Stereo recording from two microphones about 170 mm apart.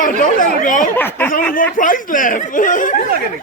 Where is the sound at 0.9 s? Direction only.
10° left (ahead or behind).